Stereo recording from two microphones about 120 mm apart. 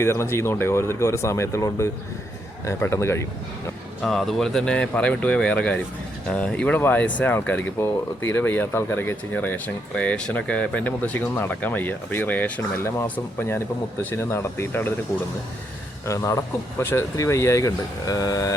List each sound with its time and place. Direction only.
0.0 s speech: 20° left (ahead or behind)
4.0 s speech: centre (ahead or behind); by 14.9 s 20° left (ahead or behind)
16.0 s speech: 25° left (ahead or behind)